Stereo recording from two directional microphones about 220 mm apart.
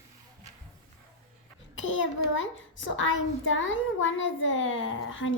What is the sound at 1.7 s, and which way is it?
A child's voice, 60° left (ahead or behind).